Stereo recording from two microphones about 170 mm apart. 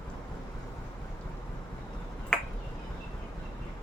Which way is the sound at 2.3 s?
5° left (ahead or behind).